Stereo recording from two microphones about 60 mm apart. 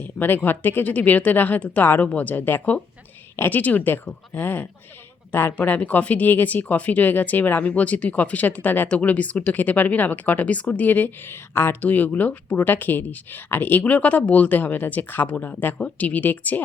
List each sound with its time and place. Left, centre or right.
0.2 s speech: left